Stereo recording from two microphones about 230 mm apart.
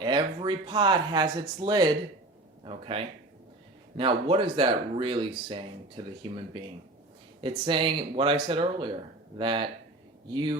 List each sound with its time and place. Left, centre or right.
0.0 s speech: centre
7.4 s speech: right